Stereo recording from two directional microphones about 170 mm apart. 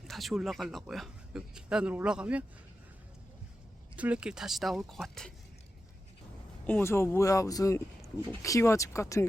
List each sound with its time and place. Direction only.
0.1 s speech: centre (ahead or behind)
3.9 s speech: 5° right (ahead or behind)
6.7 s speech: 10° left (ahead or behind)